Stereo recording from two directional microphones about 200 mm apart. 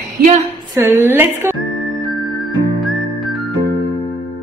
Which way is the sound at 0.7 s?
10° right (ahead or behind).